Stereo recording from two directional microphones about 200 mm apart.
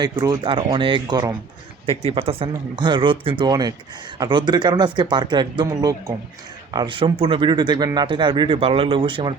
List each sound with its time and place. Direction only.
0.0 s speech: 20° right (ahead or behind)